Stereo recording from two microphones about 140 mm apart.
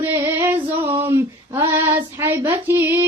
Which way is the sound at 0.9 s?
20° right (ahead or behind).